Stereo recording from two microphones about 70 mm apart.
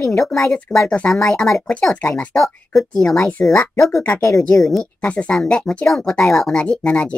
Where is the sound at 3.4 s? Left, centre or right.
Left.